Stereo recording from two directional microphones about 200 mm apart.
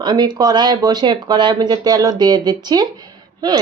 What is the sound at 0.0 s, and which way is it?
Speech, 20° right (ahead or behind).